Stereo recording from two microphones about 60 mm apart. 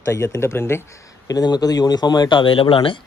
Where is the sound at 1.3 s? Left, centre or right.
Left.